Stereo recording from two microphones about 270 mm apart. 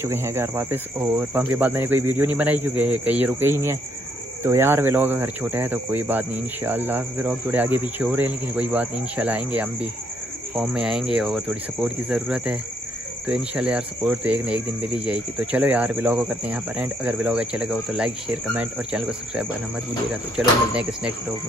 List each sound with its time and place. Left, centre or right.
0.0 s speech: centre